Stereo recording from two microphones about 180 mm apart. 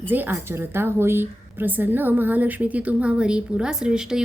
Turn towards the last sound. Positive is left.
turn(degrees=-5)  # may be behind; listen again after turning